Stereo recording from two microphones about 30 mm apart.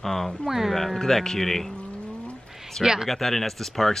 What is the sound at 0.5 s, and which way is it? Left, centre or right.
Speech, centre.